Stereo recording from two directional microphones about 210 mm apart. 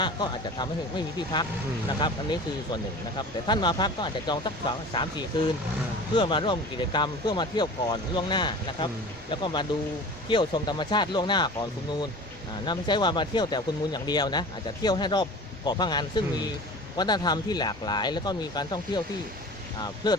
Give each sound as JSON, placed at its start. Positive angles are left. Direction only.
{"t": 0.0, "sound": "speech", "side_deg": 20}
{"t": 20.0, "sound": "speech", "side_deg": 20}